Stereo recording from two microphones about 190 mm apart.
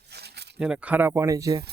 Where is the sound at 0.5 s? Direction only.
5° right (ahead or behind).